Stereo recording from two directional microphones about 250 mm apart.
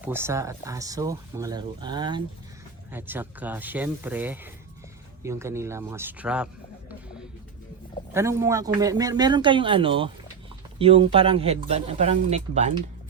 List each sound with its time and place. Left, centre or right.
0.0 s speech: centre
8.1 s speech: centre; by 12.7 s right